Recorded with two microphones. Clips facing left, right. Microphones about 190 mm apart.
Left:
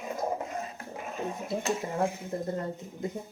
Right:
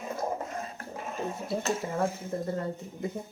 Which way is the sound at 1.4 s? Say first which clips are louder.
Even; 15° left (ahead or behind).